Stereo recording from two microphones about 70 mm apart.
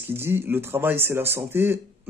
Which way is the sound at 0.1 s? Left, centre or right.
Right.